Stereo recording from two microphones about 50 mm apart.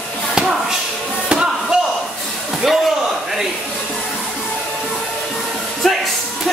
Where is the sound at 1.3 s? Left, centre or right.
Centre.